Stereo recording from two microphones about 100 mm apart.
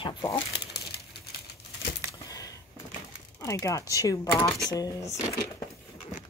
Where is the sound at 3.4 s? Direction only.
35° left (ahead or behind).